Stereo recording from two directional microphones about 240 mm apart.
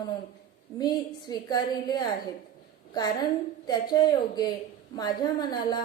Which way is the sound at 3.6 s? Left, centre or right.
Centre.